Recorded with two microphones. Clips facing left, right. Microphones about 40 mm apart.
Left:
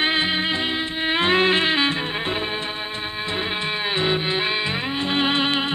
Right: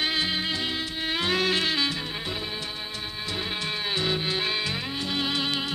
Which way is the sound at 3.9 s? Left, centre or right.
Left.